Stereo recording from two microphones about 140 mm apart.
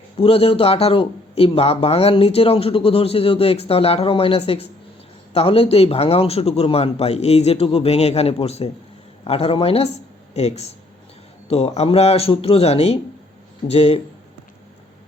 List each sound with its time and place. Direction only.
0.2 s speech: 45° left (ahead or behind)